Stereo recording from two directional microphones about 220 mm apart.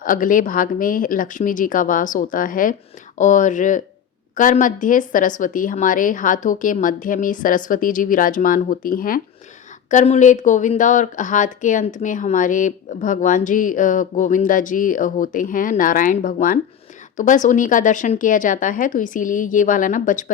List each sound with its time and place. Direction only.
0.0 s speech: 40° left (ahead or behind)